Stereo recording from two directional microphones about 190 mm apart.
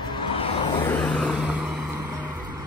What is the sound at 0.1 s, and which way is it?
Vehicle, 25° left (ahead or behind).